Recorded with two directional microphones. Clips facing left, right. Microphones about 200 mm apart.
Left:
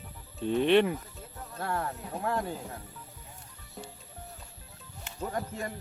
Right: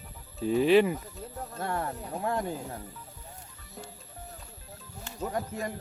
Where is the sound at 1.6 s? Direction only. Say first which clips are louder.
Even; 20° right (ahead or behind).